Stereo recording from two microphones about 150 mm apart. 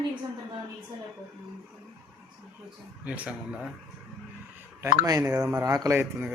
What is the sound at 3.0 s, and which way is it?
Speech, 10° right (ahead or behind).